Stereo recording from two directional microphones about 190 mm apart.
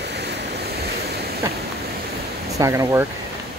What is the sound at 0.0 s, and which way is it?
Waves, 65° right (ahead or behind).